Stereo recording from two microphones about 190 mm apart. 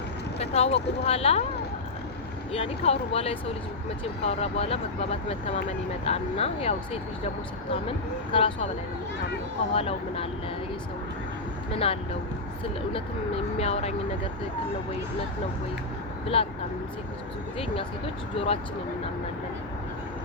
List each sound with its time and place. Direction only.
0.3 s vehicle: 35° left (ahead or behind)
1.0 s speech: 30° left (ahead or behind)
2.5 s speech: 30° left (ahead or behind)
9.7 s speech: 30° left (ahead or behind)
11.7 s speech: 30° left (ahead or behind)
16.2 s speech: 30° left (ahead or behind)
17.6 s speech: 30° left (ahead or behind)